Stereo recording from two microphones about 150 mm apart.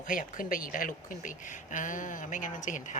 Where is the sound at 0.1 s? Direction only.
65° left (ahead or behind).